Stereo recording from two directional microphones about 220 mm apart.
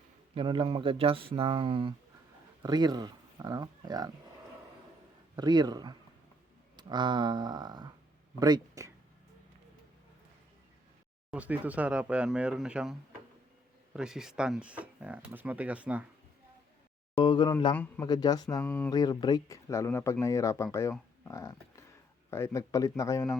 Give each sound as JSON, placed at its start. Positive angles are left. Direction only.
{"t": 0.3, "sound": "speech", "side_deg": -25}
{"t": 5.4, "sound": "speech", "side_deg": -20}
{"t": 11.3, "sound": "speech", "side_deg": -5}
{"t": 17.2, "sound": "speech", "side_deg": 20}
{"t": 18.6, "sound": "speech", "side_deg": 5}
{"t": 18.9, "sound": "speech", "side_deg": 15}
{"t": 21.2, "sound": "a sound", "side_deg": 15}
{"t": 22.3, "sound": "speech", "side_deg": 10}